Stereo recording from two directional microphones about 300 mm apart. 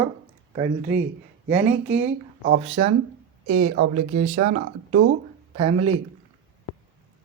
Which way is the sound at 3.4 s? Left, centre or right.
Right.